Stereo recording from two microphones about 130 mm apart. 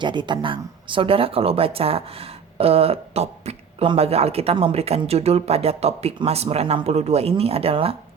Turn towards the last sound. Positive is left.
turn(degrees=-45)  # may be behind; listen again after turning